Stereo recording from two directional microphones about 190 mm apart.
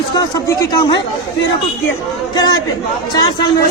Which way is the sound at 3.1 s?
20° left (ahead or behind).